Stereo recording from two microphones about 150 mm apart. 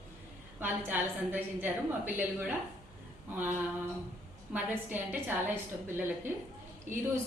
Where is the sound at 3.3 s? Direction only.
15° right (ahead or behind).